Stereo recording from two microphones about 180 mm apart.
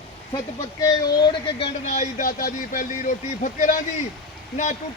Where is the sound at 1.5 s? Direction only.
35° left (ahead or behind).